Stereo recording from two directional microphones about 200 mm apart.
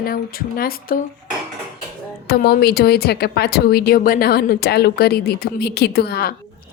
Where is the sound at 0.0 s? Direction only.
45° left (ahead or behind).